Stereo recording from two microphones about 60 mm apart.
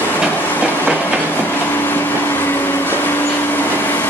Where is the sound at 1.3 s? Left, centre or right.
Left.